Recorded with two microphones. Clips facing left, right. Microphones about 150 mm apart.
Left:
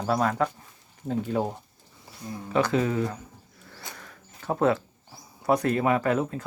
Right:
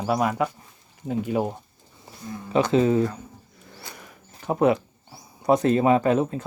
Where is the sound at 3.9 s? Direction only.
15° right (ahead or behind).